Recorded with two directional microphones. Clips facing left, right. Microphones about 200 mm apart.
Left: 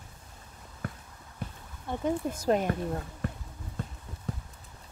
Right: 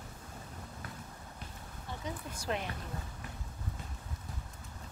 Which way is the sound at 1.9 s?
50° left (ahead or behind).